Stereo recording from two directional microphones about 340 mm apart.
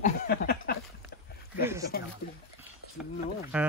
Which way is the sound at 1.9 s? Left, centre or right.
Left.